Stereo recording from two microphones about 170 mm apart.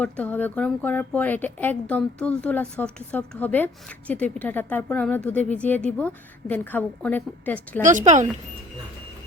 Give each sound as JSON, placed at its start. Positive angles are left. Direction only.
{"t": 0.0, "sound": "speech", "side_deg": 10}
{"t": 7.8, "sound": "speech", "side_deg": -50}